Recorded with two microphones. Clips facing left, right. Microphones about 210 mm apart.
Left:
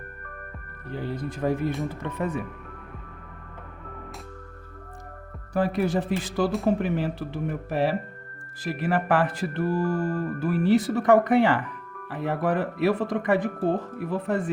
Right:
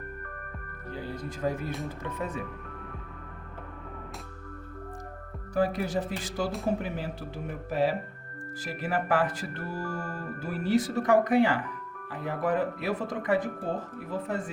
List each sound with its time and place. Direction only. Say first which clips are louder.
0.9 s music: left 5 dB; 60° left (ahead or behind)
5.5 s music: left 3 dB; 60° left (ahead or behind)